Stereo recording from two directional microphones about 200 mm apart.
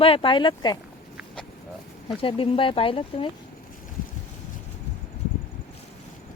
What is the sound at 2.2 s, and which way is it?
Speech, 25° left (ahead or behind).